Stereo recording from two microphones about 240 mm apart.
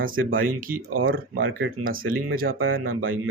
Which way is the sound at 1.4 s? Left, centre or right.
Right.